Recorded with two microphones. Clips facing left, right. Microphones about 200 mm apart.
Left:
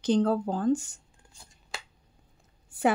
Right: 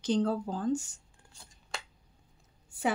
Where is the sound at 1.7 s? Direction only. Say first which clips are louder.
Even; centre (ahead or behind).